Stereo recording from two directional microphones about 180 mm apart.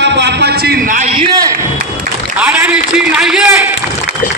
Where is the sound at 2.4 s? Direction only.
5° right (ahead or behind).